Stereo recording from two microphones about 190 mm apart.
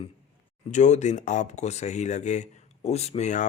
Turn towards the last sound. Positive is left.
turn(degrees=40)  # may be behind; listen again after turning